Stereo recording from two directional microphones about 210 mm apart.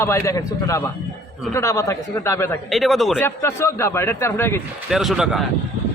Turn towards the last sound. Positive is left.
turn(degrees=0)  # may be behind; listen again after turning